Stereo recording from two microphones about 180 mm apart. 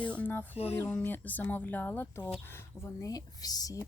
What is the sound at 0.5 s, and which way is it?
Music, 35° left (ahead or behind).